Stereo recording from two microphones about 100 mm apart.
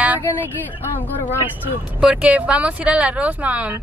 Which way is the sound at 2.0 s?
10° right (ahead or behind).